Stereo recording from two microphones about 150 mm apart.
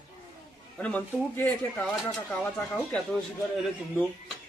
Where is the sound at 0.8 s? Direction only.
10° left (ahead or behind).